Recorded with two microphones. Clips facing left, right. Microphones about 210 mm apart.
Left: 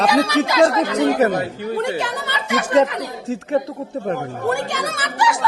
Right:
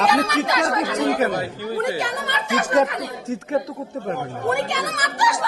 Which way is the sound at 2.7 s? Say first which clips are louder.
Left 4 dB; 30° left (ahead or behind).